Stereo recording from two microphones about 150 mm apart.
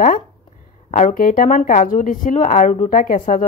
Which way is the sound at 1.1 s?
70° left (ahead or behind).